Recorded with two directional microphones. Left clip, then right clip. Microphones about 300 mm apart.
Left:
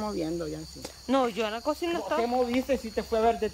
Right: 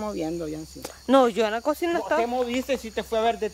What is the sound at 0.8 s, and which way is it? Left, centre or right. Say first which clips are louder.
Speech: right 8 dB; centre.